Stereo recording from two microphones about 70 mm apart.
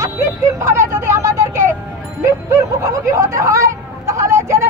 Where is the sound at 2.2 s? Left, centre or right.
Right.